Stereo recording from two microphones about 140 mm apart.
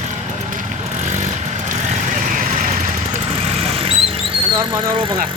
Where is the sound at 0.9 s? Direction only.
60° right (ahead or behind).